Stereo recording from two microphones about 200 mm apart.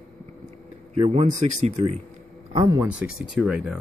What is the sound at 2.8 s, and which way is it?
Speech, 5° right (ahead or behind).